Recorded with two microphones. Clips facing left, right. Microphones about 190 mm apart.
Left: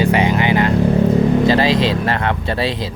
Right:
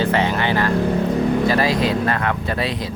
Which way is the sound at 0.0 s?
15° left (ahead or behind).